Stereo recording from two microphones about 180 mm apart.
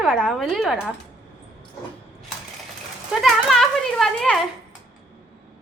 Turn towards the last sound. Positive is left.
turn(degrees=0)  # may be behind; listen again after turning